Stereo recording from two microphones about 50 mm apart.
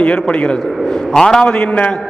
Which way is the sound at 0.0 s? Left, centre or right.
Left.